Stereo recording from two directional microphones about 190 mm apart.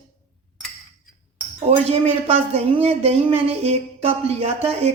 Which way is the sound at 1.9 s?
30° right (ahead or behind).